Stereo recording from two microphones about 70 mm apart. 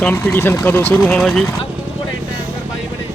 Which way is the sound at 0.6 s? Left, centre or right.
Left.